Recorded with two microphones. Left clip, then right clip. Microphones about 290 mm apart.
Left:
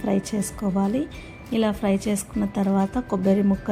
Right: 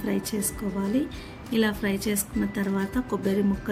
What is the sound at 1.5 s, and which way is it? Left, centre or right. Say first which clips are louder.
A woman's voice: left 3 dB; centre.